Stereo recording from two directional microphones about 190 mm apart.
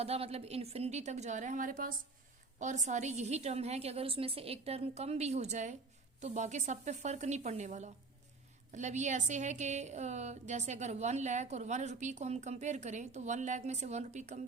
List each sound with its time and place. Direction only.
0.0 s a woman's voice: 30° right (ahead or behind)